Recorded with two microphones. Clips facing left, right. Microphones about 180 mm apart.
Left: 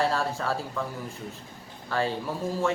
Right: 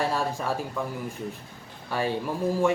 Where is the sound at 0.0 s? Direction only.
15° right (ahead or behind).